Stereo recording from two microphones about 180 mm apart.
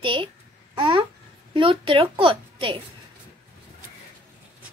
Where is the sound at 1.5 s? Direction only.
30° right (ahead or behind).